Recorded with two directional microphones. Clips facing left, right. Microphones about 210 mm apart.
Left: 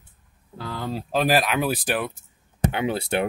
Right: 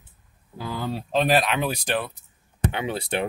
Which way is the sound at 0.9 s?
5° left (ahead or behind).